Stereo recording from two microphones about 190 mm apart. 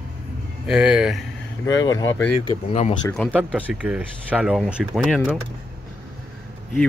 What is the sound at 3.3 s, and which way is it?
Speech, 5° right (ahead or behind).